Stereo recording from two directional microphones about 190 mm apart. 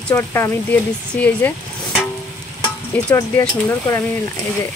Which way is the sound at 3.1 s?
15° left (ahead or behind).